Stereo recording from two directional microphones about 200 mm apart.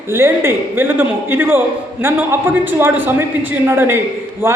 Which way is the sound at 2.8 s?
10° right (ahead or behind).